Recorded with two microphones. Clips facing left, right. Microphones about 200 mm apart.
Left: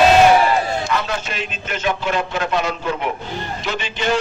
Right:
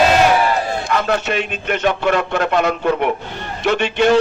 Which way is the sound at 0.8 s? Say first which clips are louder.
Right 5 dB; 60° right (ahead or behind).